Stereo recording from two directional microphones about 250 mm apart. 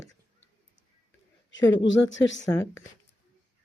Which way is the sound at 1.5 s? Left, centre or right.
Left.